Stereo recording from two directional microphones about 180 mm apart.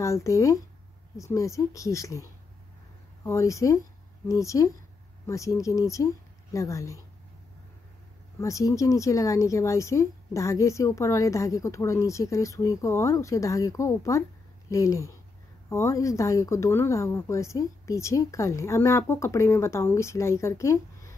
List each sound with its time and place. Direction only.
0.0 s speech: 15° left (ahead or behind)
3.3 s speech: 15° left (ahead or behind)
8.4 s speech: 15° left (ahead or behind)